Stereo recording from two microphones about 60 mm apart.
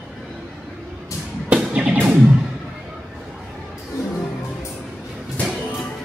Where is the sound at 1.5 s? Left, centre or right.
Right.